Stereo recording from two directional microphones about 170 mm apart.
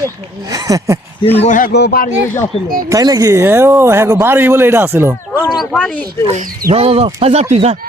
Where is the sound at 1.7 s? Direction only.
70° left (ahead or behind).